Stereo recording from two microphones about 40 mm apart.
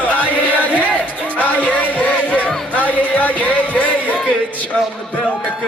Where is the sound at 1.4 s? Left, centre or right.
Left.